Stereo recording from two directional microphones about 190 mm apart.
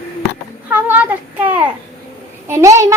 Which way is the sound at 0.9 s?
10° right (ahead or behind).